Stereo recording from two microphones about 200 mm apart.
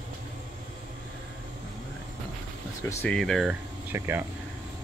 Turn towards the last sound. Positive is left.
turn(degrees=-10)  # may be behind; listen again after turning